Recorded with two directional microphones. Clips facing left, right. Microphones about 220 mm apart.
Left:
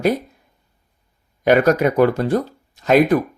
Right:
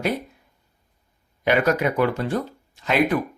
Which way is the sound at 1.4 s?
45° left (ahead or behind).